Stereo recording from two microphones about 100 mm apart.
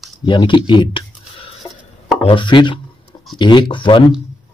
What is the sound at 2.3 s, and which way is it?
Speech, 55° left (ahead or behind).